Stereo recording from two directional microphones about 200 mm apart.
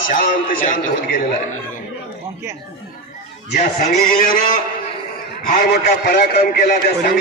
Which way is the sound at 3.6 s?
40° left (ahead or behind).